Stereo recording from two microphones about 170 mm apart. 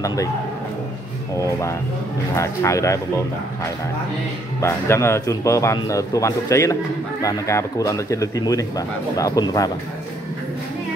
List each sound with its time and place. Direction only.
0.0 s speech: 20° left (ahead or behind)
2.3 s speech: 15° left (ahead or behind)
4.6 s speech: 15° left (ahead or behind)